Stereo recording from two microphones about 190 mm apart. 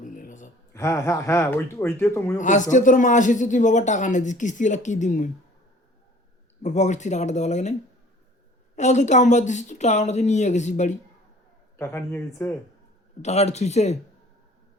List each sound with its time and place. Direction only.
0.0 s a sound: 45° left (ahead or behind)
0.7 s speech: 15° left (ahead or behind)
2.4 s a man's voice: 40° left (ahead or behind)
6.6 s a man's voice: 40° left (ahead or behind)
11.8 s speech: 15° left (ahead or behind)
13.2 s a man's voice: 35° left (ahead or behind)